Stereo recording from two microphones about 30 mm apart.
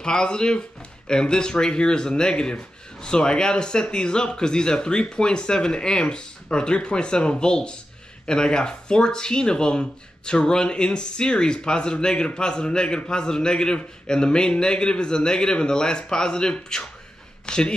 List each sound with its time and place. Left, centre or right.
0.0 s speech: left